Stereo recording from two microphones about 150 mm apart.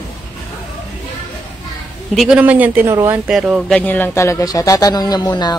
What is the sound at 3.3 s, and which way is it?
Speech, 5° right (ahead or behind).